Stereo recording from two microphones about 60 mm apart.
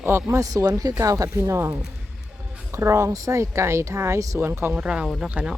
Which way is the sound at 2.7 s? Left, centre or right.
Right.